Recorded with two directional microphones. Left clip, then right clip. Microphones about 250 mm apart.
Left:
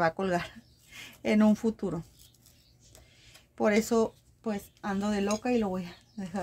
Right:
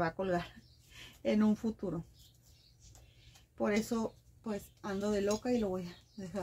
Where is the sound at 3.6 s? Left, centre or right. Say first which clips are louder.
Left 9 dB; left.